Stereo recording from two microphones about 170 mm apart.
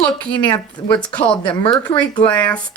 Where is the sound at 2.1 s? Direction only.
10° left (ahead or behind).